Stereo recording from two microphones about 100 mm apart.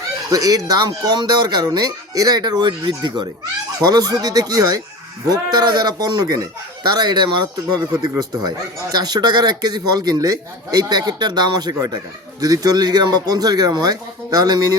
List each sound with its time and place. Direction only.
0.3 s speech: 35° right (ahead or behind)